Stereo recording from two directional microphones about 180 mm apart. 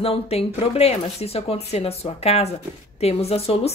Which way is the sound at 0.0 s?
35° left (ahead or behind).